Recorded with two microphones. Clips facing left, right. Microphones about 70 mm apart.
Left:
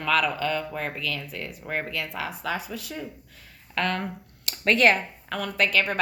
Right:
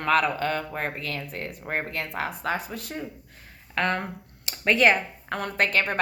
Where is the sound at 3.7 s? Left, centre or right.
Right.